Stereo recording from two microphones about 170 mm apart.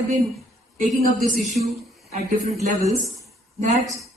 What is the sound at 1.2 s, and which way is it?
Speech, 45° right (ahead or behind).